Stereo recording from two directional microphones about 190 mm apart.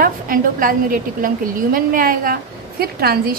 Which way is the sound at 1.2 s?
50° right (ahead or behind).